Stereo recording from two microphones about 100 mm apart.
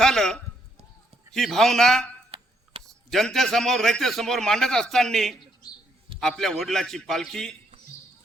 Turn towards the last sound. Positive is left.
turn(degrees=5)  # may be behind; listen again after turning